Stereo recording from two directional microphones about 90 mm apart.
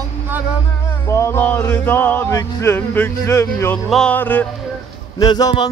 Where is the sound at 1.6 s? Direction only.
25° left (ahead or behind).